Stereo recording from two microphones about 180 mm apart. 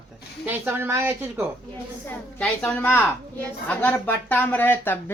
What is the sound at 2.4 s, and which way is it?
Speech, 5° left (ahead or behind).